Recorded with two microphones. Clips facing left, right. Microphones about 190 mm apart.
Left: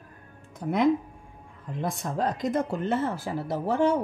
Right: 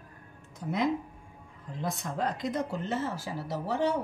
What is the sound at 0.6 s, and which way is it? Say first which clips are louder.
Speech: left 5 dB; 55° left (ahead or behind).